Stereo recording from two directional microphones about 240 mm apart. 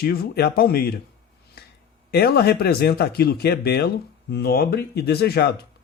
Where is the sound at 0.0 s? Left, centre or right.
Left.